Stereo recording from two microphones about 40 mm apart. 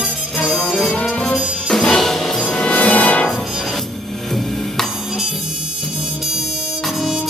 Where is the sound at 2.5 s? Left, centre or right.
Left.